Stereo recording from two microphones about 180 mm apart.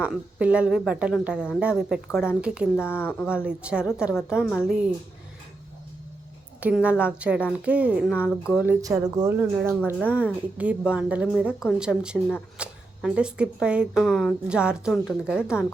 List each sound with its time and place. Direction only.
0.0 s speech: 5° right (ahead or behind)
2.7 s speech: 15° left (ahead or behind)
3.2 s speech: 5° right (ahead or behind)
6.6 s a woman's voice: 5° right (ahead or behind)
8.8 s a woman's voice: 20° right (ahead or behind)